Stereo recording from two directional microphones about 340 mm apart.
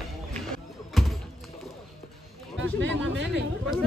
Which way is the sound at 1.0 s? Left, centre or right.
Centre.